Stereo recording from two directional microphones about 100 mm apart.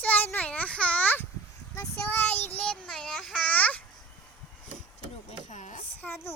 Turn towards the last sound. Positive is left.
turn(degrees=20)  # may be behind; listen again after turning